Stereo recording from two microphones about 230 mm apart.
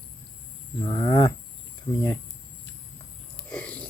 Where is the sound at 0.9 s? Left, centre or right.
Centre.